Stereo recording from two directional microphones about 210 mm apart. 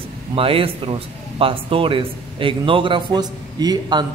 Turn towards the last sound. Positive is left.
turn(degrees=-20)  # may be behind; listen again after turning